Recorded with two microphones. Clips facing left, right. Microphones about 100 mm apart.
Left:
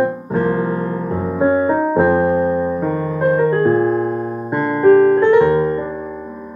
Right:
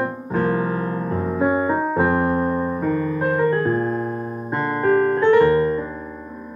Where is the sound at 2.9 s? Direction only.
10° left (ahead or behind).